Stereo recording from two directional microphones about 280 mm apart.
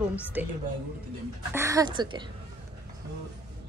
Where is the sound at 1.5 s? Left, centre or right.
Centre.